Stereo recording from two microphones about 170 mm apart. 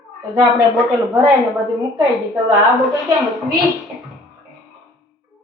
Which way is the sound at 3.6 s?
Centre (ahead or behind).